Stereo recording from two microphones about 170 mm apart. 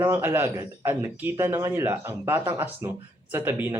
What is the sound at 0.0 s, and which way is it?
Speech, 15° right (ahead or behind).